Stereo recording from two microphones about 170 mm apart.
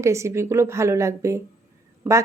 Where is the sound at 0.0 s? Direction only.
15° right (ahead or behind).